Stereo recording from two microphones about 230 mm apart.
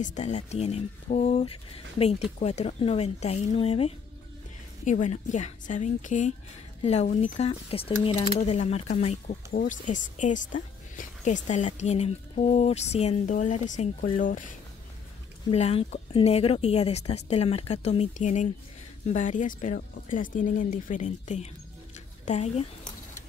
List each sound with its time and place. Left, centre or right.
0.0 s speech: left
15.5 s speech: left
21.9 s a sound: left